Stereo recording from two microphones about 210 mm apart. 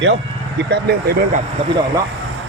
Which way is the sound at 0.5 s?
50° right (ahead or behind).